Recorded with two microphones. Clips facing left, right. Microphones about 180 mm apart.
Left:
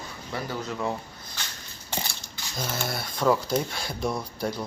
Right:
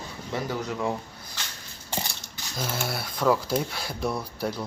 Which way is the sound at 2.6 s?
5° right (ahead or behind).